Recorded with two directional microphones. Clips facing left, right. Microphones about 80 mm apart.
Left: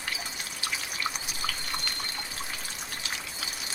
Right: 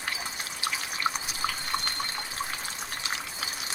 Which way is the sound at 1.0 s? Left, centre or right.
Right.